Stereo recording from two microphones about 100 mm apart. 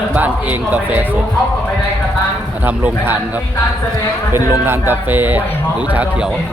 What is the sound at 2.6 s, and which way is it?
Speech, 20° right (ahead or behind).